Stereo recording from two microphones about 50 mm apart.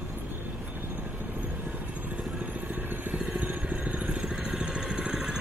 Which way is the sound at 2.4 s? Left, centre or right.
Right.